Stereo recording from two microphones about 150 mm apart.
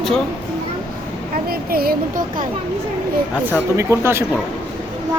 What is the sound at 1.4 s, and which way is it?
A woman's voice, 90° right.